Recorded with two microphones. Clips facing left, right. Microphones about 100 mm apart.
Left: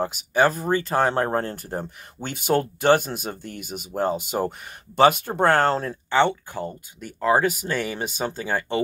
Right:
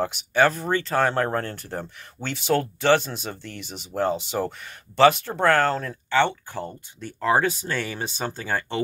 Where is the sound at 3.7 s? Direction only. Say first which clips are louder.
Left 5 dB; 10° left (ahead or behind).